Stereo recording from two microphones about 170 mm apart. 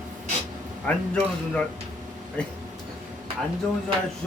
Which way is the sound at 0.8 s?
10° left (ahead or behind).